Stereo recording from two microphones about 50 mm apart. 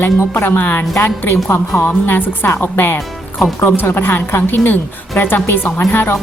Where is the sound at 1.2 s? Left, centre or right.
Left.